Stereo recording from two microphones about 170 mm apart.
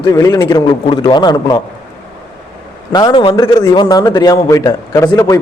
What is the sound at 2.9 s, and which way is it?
A man's voice, 25° left (ahead or behind).